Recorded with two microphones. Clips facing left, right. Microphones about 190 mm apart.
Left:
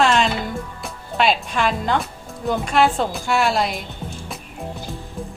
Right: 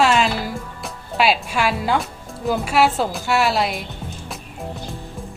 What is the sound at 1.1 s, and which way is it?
Speech, 5° right (ahead or behind).